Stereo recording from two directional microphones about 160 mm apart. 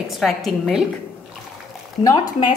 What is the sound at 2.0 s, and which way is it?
Speech, 20° left (ahead or behind).